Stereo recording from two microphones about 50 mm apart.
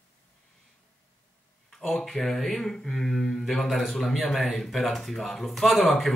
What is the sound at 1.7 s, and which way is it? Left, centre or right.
Speech, centre.